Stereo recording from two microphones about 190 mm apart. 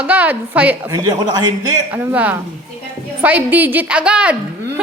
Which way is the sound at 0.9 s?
20° right (ahead or behind).